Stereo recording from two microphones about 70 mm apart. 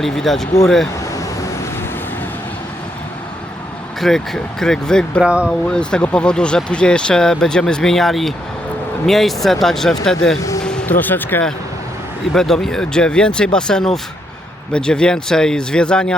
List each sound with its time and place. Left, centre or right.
0.0 s speech: centre
4.0 s speech: centre
5.2 s speech: centre
5.5 s speech: centre
10.6 s music: centre
10.8 s speech: left
12.3 s speech: centre